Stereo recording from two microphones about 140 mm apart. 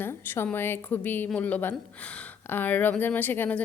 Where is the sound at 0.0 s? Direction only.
15° left (ahead or behind).